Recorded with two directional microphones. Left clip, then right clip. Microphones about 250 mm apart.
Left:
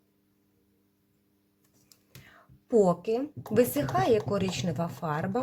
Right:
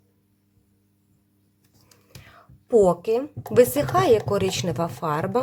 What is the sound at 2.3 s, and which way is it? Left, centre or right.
A woman's voice, centre.